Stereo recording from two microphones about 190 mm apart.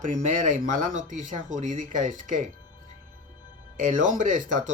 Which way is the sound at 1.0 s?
40° right (ahead or behind).